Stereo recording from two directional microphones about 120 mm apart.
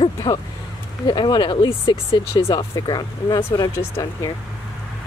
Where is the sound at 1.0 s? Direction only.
40° left (ahead or behind).